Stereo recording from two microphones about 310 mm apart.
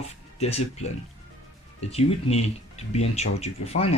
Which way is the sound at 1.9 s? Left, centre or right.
Centre.